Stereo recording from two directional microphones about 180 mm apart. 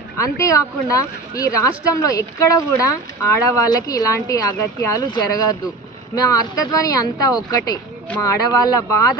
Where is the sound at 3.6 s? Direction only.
20° left (ahead or behind).